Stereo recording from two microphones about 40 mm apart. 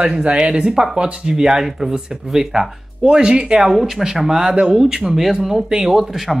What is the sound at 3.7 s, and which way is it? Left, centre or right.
Speech, centre.